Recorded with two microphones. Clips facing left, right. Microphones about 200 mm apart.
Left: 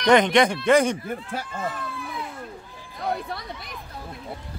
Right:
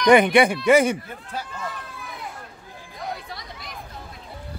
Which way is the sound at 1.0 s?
50° left (ahead or behind).